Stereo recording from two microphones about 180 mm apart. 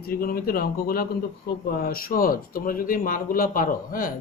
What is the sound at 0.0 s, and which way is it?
Speech, 55° left (ahead or behind).